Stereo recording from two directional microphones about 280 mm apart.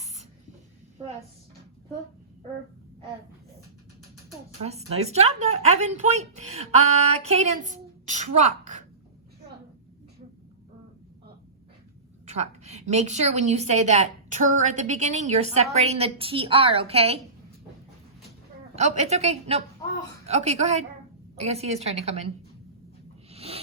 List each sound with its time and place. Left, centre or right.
4.6 s a woman's voice: right
12.4 s a woman's voice: right
18.8 s a woman's voice: right
23.3 s a sound: right